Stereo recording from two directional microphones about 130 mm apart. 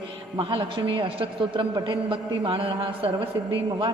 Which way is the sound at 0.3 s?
40° right (ahead or behind).